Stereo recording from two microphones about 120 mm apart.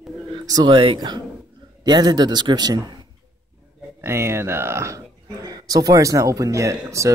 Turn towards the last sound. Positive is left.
turn(degrees=-25)  # may be behind; listen again after turning